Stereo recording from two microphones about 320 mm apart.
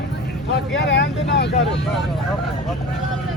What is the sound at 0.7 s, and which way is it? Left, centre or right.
Speech, left.